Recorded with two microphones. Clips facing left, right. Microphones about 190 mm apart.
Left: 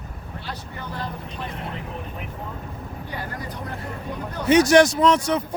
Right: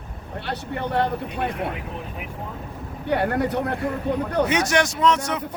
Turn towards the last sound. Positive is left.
turn(degrees=35)  # may be behind; listen again after turning